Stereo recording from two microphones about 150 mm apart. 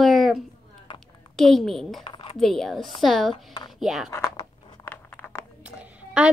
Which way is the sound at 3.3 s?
30° left (ahead or behind).